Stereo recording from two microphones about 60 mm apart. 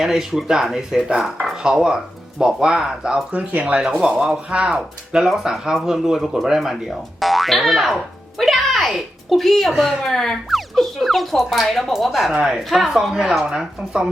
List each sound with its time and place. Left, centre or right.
0.0 s speech: centre
3.3 s speech: right